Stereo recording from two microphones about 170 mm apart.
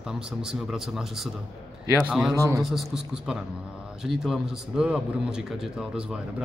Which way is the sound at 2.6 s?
Centre (ahead or behind).